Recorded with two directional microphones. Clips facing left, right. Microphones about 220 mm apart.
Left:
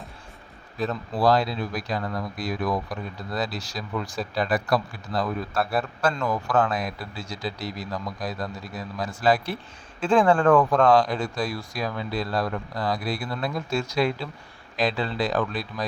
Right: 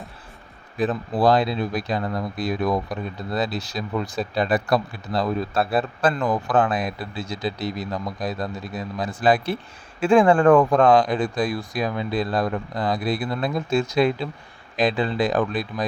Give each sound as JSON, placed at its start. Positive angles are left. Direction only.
{"t": 0.8, "sound": "speech", "side_deg": -15}